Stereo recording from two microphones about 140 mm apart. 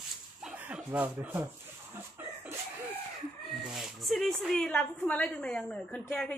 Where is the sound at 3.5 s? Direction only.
Centre (ahead or behind).